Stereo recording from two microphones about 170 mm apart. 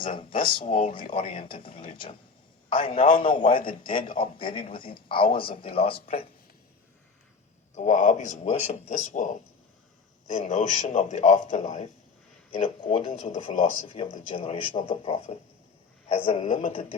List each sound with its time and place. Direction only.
0.1 s speech: 30° left (ahead or behind)
7.8 s a man's voice: 45° left (ahead or behind)
12.5 s speech: 30° left (ahead or behind)
16.4 s a man's voice: 45° left (ahead or behind)